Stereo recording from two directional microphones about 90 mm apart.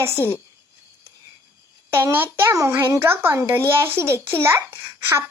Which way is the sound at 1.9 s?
25° right (ahead or behind).